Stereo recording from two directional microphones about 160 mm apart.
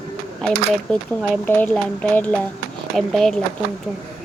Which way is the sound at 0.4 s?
5° left (ahead or behind).